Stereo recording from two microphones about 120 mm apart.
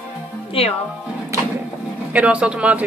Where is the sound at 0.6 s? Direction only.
55° left (ahead or behind).